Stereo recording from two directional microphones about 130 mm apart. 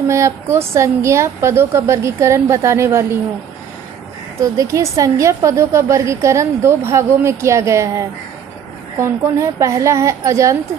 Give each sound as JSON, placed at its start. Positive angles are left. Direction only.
{"t": 0.1, "sound": "a woman's voice", "side_deg": -20}
{"t": 4.4, "sound": "a woman's voice", "side_deg": -25}